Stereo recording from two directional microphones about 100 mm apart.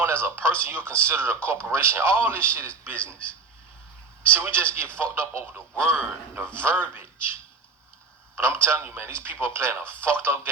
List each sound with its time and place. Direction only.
0.0 s speech: 25° right (ahead or behind)
4.3 s speech: 25° right (ahead or behind)
8.4 s speech: 25° right (ahead or behind)